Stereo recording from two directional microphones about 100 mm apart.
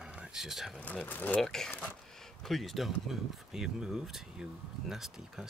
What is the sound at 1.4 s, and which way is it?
Speech, 5° left (ahead or behind).